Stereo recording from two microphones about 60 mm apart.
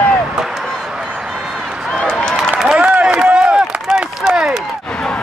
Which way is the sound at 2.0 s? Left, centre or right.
Centre.